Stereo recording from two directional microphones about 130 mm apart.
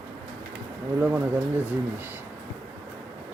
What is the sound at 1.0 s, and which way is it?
Speech, 20° right (ahead or behind).